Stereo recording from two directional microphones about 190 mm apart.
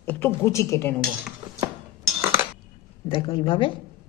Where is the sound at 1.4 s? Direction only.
25° right (ahead or behind).